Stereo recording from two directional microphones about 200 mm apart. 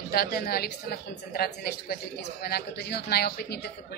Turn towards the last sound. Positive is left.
turn(degrees=50)  # may be behind; listen again after turning